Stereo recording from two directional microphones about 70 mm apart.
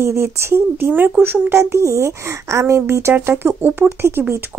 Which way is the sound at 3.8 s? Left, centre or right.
Right.